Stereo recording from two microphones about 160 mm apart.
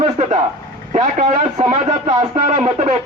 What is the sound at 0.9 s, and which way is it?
Speech, 45° right (ahead or behind).